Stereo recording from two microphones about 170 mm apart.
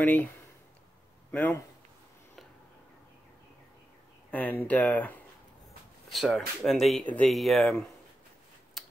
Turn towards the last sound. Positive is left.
turn(degrees=0)  # may be behind; listen again after turning